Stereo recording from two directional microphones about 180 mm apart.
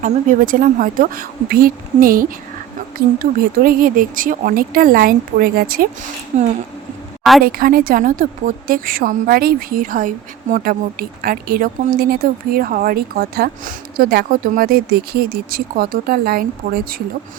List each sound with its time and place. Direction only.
0.0 s a woman's voice: 50° right (ahead or behind)
3.3 s a woman's voice: 55° right (ahead or behind)
6.3 s speech: 40° right (ahead or behind)
7.4 s a woman's voice: 55° right (ahead or behind)